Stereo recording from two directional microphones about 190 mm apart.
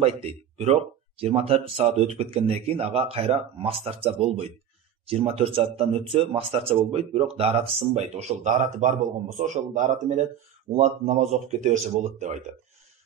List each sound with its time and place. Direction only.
0.0 s speech: 30° right (ahead or behind)